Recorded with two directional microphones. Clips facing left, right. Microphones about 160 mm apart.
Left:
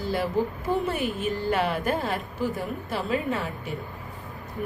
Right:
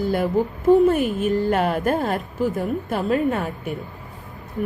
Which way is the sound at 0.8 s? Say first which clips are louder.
Right 9 dB; 45° right (ahead or behind).